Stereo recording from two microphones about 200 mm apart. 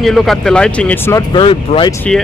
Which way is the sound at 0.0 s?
Centre (ahead or behind).